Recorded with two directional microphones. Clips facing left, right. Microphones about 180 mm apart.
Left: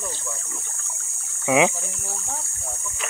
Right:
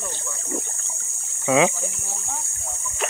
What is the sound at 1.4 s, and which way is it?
Speech, 15° left (ahead or behind).